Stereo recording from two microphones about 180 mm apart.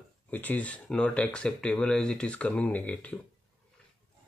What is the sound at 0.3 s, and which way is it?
Speech, 10° left (ahead or behind).